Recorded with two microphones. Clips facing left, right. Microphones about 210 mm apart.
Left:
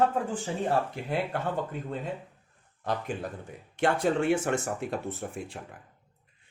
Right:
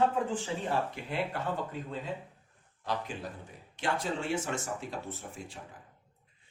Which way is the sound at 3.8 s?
55° left (ahead or behind).